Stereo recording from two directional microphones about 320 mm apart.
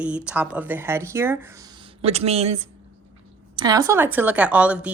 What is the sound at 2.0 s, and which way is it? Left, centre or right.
A woman's voice, centre.